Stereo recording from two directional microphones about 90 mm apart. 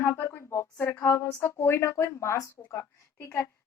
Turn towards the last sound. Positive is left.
turn(degrees=30)  # may be behind; listen again after turning